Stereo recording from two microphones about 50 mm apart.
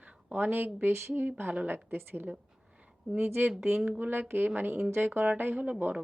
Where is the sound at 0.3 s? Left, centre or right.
Right.